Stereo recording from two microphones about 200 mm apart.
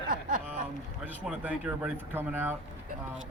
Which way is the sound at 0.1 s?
40° right (ahead or behind).